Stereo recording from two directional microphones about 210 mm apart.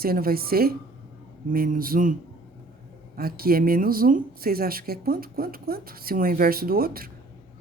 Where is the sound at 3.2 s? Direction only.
45° right (ahead or behind).